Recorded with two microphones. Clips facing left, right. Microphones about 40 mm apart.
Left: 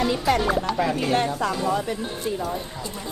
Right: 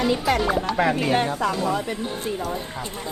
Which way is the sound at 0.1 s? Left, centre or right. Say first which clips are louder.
Even; centre.